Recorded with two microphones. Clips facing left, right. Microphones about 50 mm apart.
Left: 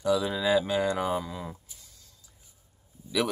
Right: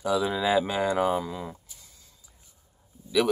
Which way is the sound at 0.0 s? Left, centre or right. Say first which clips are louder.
Right 1 dB; centre.